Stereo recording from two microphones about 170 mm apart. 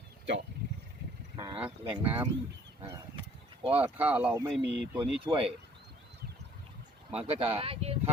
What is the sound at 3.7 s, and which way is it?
Speech, 10° right (ahead or behind).